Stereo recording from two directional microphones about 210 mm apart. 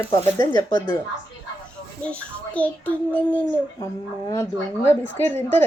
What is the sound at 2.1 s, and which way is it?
A child's voice, 5° left (ahead or behind).